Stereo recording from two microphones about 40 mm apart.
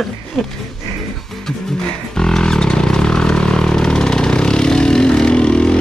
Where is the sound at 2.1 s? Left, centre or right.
Centre.